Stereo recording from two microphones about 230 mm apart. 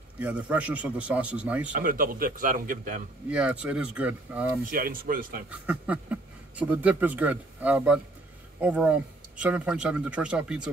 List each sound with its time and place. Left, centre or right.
0.2 s speech: centre
1.7 s speech: right
3.3 s speech: centre
4.6 s speech: right
5.7 s speech: centre